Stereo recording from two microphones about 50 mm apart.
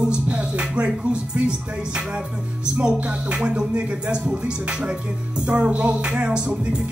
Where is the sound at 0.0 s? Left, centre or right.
Right.